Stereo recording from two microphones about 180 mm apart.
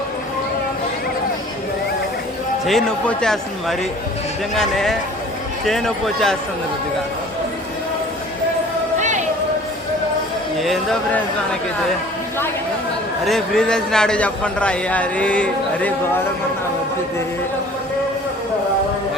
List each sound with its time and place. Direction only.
2.6 s a man's voice: centre (ahead or behind)
9.0 s a sound: 40° right (ahead or behind)
10.6 s a man's voice: centre (ahead or behind)
13.2 s a man's voice: centre (ahead or behind)